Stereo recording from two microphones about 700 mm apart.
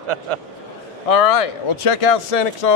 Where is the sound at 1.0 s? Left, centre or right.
Left.